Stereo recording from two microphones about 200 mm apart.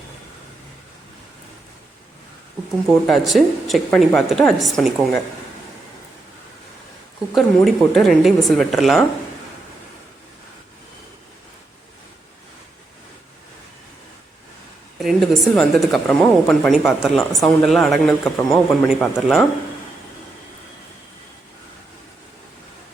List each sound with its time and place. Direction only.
3.1 s a woman's voice: centre (ahead or behind)
7.3 s a woman's voice: centre (ahead or behind)
14.9 s a woman's voice: centre (ahead or behind)